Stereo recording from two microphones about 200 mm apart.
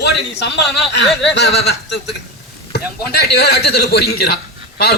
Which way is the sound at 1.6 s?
55° left (ahead or behind).